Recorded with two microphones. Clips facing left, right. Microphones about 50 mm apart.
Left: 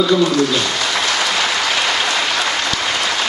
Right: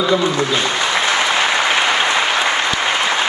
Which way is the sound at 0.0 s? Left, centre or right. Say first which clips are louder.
Left 2 dB; right.